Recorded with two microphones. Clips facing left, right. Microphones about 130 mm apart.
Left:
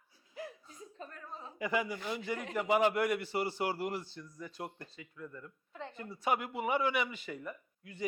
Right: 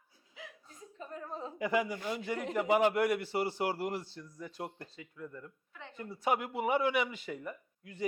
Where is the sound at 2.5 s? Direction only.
30° right (ahead or behind).